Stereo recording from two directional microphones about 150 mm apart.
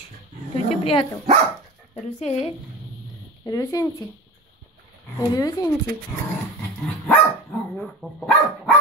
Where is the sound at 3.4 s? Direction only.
20° left (ahead or behind).